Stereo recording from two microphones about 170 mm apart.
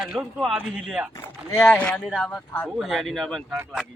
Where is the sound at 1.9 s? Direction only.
Centre (ahead or behind).